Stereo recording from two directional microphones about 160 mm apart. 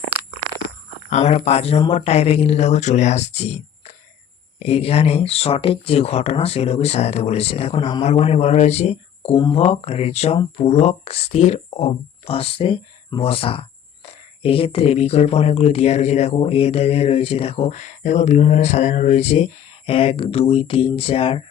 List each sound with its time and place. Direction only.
1.1 s speech: 45° left (ahead or behind)
4.6 s speech: 40° left (ahead or behind)